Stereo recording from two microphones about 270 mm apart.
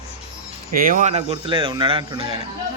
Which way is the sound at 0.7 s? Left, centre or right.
Right.